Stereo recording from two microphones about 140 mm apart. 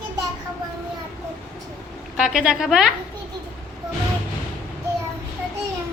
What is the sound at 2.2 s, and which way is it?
Speech, 5° right (ahead or behind).